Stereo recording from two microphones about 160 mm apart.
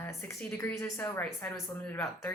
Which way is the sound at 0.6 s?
15° left (ahead or behind).